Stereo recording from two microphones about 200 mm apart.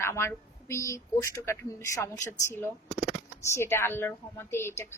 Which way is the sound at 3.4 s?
15° left (ahead or behind).